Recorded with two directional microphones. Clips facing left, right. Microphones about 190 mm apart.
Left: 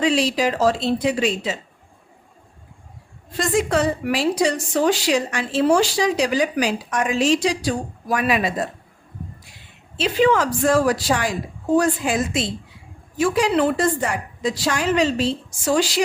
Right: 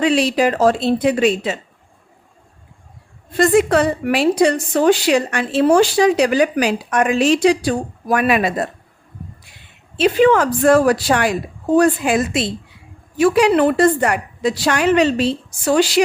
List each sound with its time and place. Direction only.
0.0 s a woman's voice: 60° right (ahead or behind)
3.3 s a woman's voice: 60° right (ahead or behind)
10.0 s a woman's voice: 55° right (ahead or behind)